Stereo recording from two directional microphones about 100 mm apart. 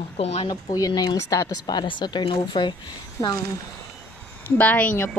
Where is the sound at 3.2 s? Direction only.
35° left (ahead or behind).